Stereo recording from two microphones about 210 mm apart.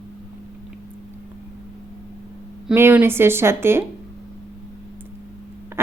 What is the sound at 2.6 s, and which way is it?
A woman's voice, 10° right (ahead or behind).